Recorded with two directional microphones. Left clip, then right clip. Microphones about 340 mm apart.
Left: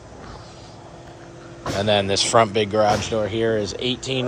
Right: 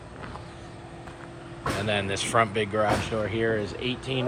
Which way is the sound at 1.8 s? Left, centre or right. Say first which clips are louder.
Left 10 dB; centre.